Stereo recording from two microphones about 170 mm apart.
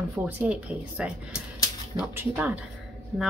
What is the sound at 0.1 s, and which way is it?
A woman's voice, 10° right (ahead or behind).